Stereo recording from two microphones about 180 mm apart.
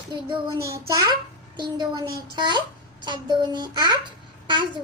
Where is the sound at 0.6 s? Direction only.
15° right (ahead or behind).